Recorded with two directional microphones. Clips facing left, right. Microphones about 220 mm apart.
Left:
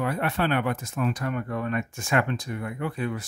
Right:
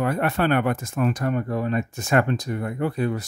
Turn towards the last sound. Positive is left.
turn(degrees=-40)  # may be behind; listen again after turning